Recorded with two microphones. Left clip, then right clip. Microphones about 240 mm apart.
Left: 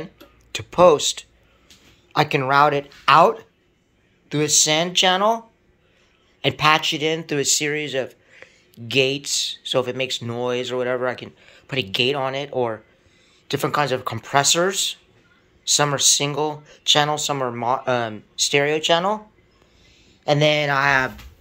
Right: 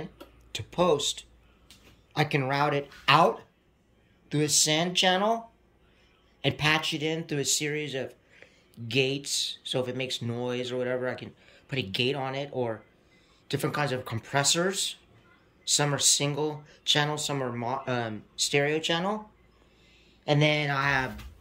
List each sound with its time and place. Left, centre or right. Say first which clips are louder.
0.0 s speech: left 6 dB; centre
6.4 s speech: left 9 dB; centre
20.2 s speech: left 8 dB; centre